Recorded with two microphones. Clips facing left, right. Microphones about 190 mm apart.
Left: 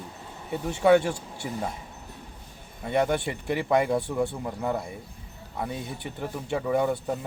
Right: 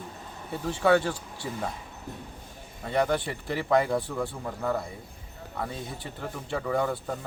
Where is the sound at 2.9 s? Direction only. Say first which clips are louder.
Left 1 dB; 20° left (ahead or behind).